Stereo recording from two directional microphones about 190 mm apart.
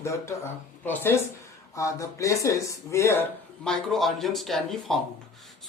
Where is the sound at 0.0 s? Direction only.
15° left (ahead or behind).